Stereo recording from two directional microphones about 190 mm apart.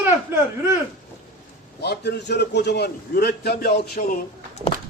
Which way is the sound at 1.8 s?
60° left (ahead or behind).